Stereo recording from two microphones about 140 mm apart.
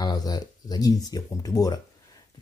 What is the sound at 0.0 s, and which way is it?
Speech, 30° left (ahead or behind).